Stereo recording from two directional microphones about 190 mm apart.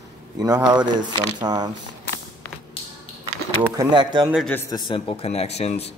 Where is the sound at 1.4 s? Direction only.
20° right (ahead or behind).